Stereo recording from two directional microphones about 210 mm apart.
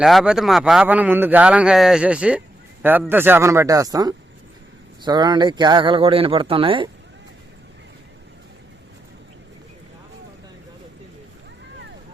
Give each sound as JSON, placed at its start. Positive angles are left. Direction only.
{"t": 0.0, "sound": "speech", "side_deg": 0}